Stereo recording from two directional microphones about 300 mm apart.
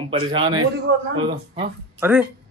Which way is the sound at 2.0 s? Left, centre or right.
Centre.